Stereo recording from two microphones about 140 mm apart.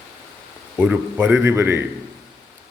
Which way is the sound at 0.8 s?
10° right (ahead or behind).